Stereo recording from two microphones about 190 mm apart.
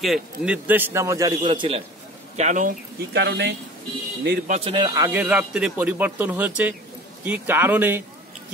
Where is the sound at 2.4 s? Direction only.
40° right (ahead or behind).